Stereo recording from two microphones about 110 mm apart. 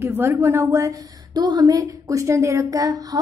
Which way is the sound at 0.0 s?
20° right (ahead or behind).